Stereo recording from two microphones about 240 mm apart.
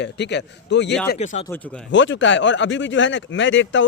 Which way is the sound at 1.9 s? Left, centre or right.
Left.